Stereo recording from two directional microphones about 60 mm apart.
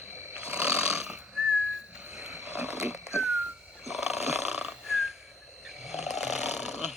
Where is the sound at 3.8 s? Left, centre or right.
Centre.